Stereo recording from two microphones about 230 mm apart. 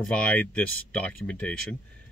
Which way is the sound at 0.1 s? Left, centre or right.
Centre.